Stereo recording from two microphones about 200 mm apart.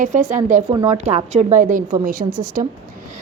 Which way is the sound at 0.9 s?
35° right (ahead or behind).